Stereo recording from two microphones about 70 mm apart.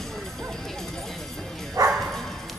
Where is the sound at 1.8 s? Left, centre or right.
Right.